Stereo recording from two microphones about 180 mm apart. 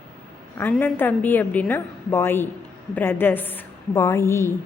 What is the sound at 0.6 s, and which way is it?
A woman's voice, 10° left (ahead or behind).